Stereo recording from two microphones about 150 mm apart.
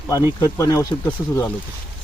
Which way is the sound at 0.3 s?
20° left (ahead or behind).